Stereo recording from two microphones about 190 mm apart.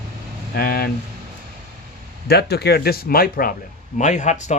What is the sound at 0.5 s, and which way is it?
Speech, 50° left (ahead or behind).